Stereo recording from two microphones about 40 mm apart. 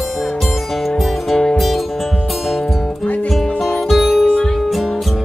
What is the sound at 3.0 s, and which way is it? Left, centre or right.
Music, left.